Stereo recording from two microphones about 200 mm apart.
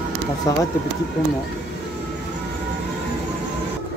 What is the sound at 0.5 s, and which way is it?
Speech, 15° left (ahead or behind).